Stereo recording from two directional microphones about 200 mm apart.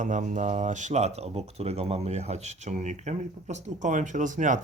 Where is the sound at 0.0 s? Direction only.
40° right (ahead or behind).